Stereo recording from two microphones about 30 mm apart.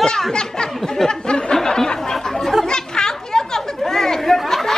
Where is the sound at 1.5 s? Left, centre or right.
Centre.